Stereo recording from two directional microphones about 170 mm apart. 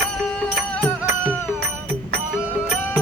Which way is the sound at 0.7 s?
10° left (ahead or behind).